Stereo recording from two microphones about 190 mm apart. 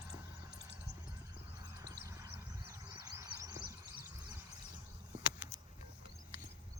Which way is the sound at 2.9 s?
20° right (ahead or behind).